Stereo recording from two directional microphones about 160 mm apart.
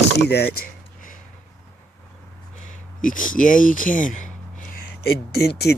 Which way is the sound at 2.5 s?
50° left (ahead or behind).